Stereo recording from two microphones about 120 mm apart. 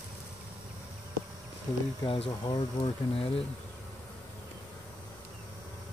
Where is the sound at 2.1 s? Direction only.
45° left (ahead or behind).